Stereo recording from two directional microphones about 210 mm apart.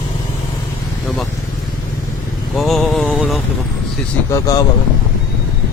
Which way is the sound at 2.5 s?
Centre (ahead or behind).